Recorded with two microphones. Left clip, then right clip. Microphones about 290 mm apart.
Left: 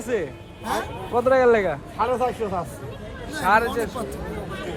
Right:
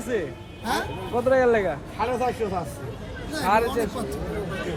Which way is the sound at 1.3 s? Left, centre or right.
Left.